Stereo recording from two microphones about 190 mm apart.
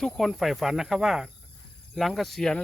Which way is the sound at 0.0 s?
Centre (ahead or behind).